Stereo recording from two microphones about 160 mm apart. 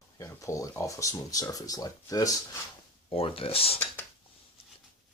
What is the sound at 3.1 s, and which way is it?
Speech, 35° left (ahead or behind).